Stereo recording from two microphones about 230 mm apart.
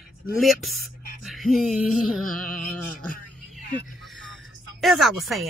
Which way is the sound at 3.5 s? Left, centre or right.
Centre.